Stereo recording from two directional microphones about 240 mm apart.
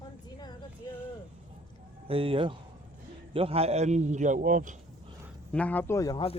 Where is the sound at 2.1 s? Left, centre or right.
Right.